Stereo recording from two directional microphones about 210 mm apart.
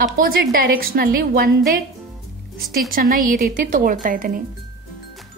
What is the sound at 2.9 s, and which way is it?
A woman's voice, 40° right (ahead or behind).